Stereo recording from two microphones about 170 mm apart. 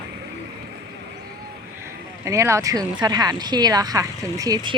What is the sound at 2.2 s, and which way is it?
Speech, 15° right (ahead or behind).